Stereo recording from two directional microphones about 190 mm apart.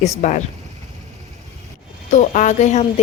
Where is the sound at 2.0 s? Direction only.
40° left (ahead or behind).